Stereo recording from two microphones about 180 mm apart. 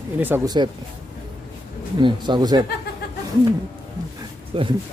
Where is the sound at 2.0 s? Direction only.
25° right (ahead or behind).